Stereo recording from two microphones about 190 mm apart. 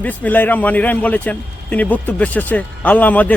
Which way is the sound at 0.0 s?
10° left (ahead or behind).